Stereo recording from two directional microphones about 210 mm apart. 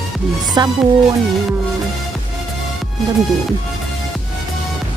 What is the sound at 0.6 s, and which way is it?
Speech, 20° right (ahead or behind).